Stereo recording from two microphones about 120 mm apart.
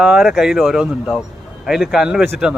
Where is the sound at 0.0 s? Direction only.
5° right (ahead or behind).